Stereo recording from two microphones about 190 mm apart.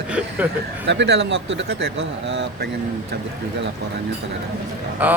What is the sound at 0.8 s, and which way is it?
Speech, 65° right (ahead or behind).